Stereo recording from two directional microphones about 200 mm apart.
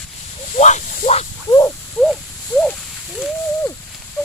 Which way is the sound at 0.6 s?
35° left (ahead or behind).